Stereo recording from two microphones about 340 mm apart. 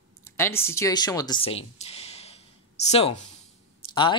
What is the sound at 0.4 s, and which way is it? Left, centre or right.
Speech, centre.